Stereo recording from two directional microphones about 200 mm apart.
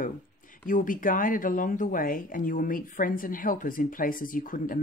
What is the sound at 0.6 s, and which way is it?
Speech, 45° left (ahead or behind).